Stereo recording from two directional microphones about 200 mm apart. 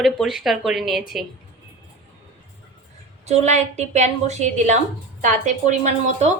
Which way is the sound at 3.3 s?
35° right (ahead or behind).